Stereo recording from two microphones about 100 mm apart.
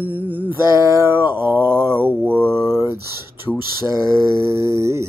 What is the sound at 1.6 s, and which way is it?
Mantra, 25° right (ahead or behind).